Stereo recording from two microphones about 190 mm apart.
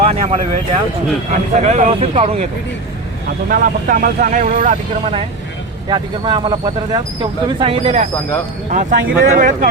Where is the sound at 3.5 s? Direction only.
45° right (ahead or behind).